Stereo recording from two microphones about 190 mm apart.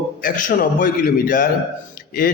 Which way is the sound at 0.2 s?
45° left (ahead or behind).